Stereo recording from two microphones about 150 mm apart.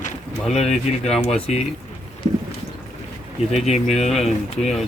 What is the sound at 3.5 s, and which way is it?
Speech, 50° left (ahead or behind).